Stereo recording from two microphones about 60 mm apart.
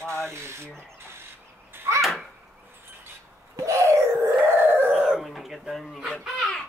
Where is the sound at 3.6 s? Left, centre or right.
Right.